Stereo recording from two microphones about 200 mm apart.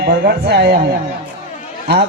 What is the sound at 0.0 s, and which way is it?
Speech, 55° right (ahead or behind).